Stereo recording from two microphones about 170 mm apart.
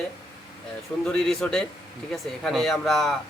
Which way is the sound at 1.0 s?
5° left (ahead or behind).